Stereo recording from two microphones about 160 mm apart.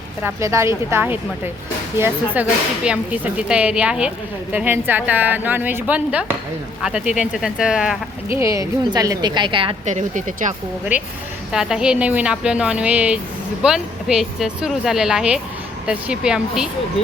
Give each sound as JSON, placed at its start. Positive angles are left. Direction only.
{"t": 0.2, "sound": "a woman's voice", "side_deg": -15}
{"t": 8.4, "sound": "a woman's voice", "side_deg": -20}
{"t": 9.8, "sound": "speech", "side_deg": -50}
{"t": 10.9, "sound": "a woman's voice", "side_deg": -10}